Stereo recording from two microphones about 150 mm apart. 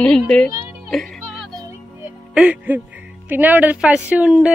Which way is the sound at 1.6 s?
20° right (ahead or behind).